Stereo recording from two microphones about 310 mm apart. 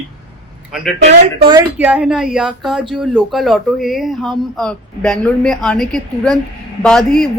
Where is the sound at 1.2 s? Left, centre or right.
Centre.